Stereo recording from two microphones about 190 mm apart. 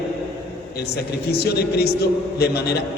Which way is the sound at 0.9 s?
55° left (ahead or behind).